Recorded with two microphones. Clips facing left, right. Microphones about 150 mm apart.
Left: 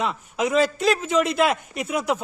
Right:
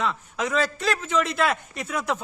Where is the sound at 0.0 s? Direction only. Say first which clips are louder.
Left 3 dB; 15° left (ahead or behind).